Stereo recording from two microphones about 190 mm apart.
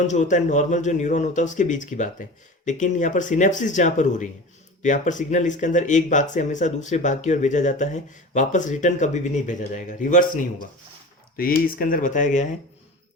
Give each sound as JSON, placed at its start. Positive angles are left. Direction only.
{"t": 0.1, "sound": "speech", "side_deg": 40}